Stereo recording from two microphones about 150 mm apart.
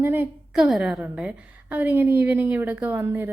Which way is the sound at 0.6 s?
5° right (ahead or behind).